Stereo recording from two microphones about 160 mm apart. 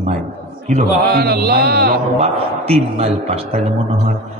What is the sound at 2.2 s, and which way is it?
Speech, 40° right (ahead or behind).